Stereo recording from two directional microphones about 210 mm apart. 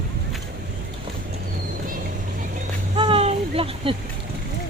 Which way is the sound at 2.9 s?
25° right (ahead or behind).